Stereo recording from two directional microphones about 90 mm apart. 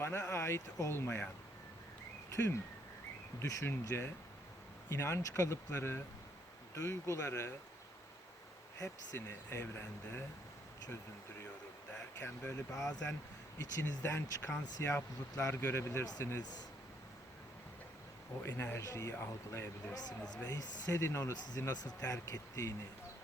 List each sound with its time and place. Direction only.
0.0 s speech: 30° left (ahead or behind)
3.4 s speech: 35° left (ahead or behind)
8.8 s speech: 30° left (ahead or behind)
12.1 s speech: 25° left (ahead or behind)
12.7 s speech: 35° left (ahead or behind)
18.4 s speech: 30° left (ahead or behind)
19.9 s speech: 45° left (ahead or behind)